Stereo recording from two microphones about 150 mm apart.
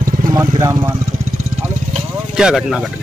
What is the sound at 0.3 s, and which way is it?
Speech, 20° right (ahead or behind).